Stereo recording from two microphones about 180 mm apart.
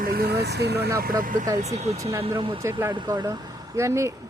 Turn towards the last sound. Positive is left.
turn(degrees=-15)  # may be behind; listen again after turning